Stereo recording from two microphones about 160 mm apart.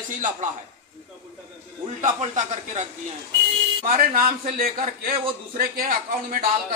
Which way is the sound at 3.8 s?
65° right (ahead or behind).